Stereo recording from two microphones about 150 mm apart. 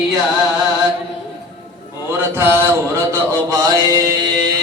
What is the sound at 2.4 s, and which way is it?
Mantra, 15° right (ahead or behind).